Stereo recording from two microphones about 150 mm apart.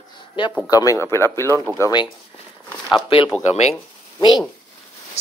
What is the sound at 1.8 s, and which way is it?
Speech, 30° left (ahead or behind).